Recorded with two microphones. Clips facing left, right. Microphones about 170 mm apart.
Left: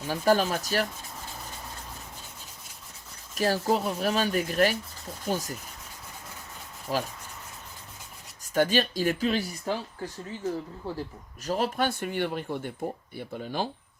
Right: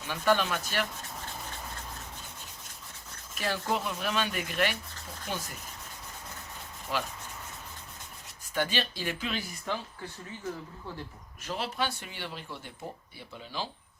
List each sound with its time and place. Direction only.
0.0 s speech: 40° left (ahead or behind)
3.3 s speech: 40° left (ahead or behind)
6.9 s speech: 40° left (ahead or behind)
8.5 s speech: 45° left (ahead or behind)